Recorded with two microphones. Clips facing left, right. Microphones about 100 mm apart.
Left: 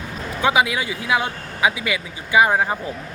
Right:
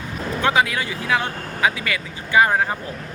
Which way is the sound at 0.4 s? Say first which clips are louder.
Left 1 dB; 15° left (ahead or behind).